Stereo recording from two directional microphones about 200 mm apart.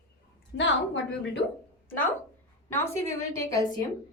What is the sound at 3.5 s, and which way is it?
Speech, 20° left (ahead or behind).